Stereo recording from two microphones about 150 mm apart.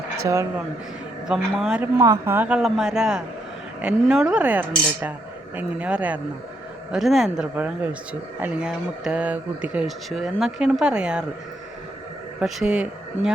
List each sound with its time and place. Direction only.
0.3 s speech: 20° right (ahead or behind)
1.3 s speech: centre (ahead or behind)
1.8 s speech: 20° right (ahead or behind)
12.4 s speech: 5° right (ahead or behind)